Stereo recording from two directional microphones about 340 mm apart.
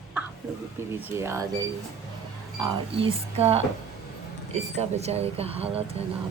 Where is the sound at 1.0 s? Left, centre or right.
Centre.